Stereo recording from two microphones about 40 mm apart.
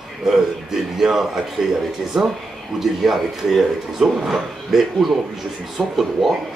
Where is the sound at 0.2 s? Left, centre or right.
Centre.